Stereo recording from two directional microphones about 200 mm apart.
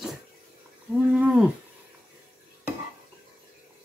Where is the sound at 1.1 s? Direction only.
5° right (ahead or behind).